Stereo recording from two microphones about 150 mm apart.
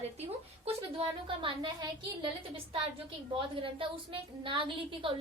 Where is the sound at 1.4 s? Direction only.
35° right (ahead or behind).